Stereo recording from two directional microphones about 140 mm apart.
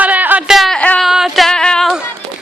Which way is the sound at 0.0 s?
10° right (ahead or behind).